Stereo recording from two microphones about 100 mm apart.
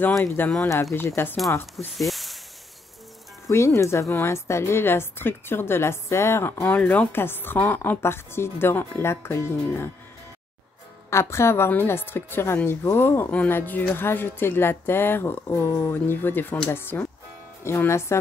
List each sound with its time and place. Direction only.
0.4 s a woman's voice: 20° left (ahead or behind)
2.0 s a sound: centre (ahead or behind)
3.4 s a woman's voice: 30° left (ahead or behind)
11.1 s a woman's voice: 30° left (ahead or behind)